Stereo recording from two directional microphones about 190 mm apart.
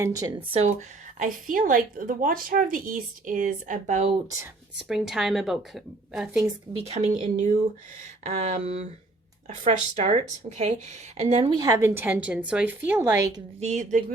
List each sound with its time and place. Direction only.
0.0 s speech: 15° right (ahead or behind)
0.3 s a woman's voice: 35° right (ahead or behind)
4.9 s a woman's voice: centre (ahead or behind)
6.7 s speech: 35° right (ahead or behind); by 13.4 s 15° right (ahead or behind)
13.6 s speech: 40° right (ahead or behind)